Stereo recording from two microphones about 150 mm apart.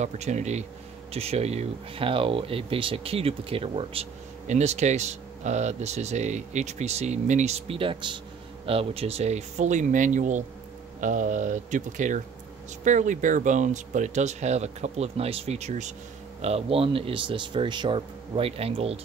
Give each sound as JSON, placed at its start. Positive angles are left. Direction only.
{"t": 0.0, "sound": "speech", "side_deg": -50}